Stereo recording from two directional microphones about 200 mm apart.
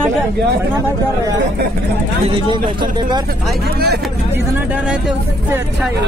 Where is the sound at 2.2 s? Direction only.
25° right (ahead or behind).